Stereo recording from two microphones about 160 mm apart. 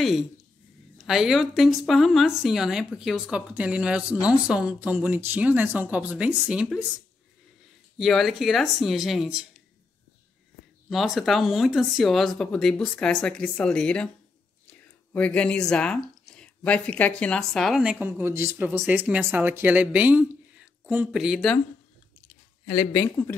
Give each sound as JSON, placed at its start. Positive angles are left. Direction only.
{"t": 0.9, "sound": "speech", "side_deg": 0}
{"t": 8.0, "sound": "speech", "side_deg": 0}
{"t": 10.9, "sound": "speech", "side_deg": 0}
{"t": 22.8, "sound": "speech", "side_deg": 15}